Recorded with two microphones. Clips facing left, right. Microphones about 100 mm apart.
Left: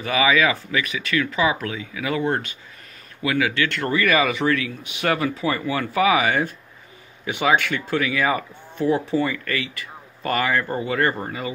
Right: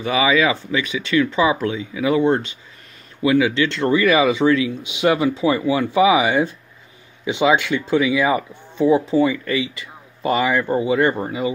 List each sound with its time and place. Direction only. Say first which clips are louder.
0.0 s speech: right 2 dB; 20° right (ahead or behind)